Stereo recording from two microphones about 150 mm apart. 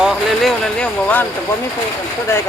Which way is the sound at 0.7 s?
10° left (ahead or behind).